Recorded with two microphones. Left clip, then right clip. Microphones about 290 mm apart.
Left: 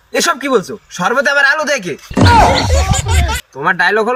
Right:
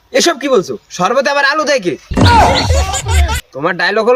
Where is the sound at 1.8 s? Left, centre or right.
Centre.